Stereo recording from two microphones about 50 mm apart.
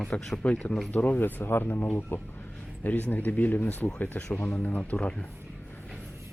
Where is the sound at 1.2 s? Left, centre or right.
Left.